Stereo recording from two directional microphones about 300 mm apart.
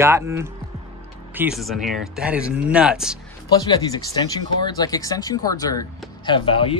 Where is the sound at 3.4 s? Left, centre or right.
Centre.